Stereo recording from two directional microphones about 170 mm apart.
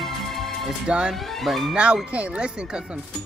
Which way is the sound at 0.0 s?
Centre (ahead or behind).